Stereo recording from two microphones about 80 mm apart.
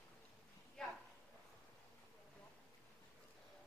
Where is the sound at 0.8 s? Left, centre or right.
Centre.